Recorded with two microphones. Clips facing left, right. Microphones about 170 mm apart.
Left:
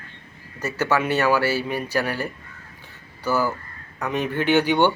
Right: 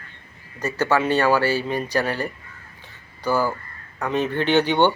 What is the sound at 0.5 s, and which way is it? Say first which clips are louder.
Speech: right 2 dB; 10° right (ahead or behind).